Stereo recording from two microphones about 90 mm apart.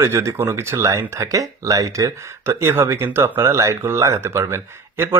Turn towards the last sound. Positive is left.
turn(degrees=-30)  # may be behind; listen again after turning